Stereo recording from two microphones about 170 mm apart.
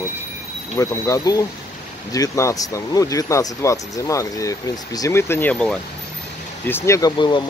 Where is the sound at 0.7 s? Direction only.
20° left (ahead or behind).